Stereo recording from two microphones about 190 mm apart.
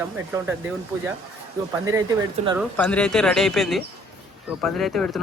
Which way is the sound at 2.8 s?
10° left (ahead or behind).